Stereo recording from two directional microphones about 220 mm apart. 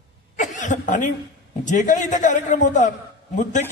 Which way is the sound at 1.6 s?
35° left (ahead or behind).